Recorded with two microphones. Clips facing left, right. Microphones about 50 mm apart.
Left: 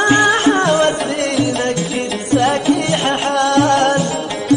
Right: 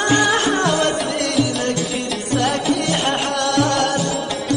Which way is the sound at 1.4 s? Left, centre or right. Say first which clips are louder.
Left 4 dB; left.